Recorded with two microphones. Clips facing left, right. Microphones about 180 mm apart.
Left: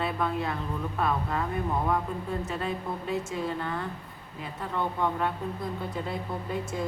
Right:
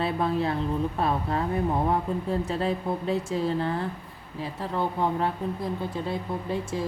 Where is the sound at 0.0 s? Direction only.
30° right (ahead or behind).